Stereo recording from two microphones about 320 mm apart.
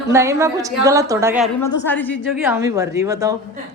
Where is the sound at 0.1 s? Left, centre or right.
Centre.